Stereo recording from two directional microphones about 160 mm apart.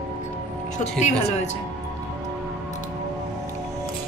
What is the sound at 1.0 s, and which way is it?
Speech, 45° left (ahead or behind).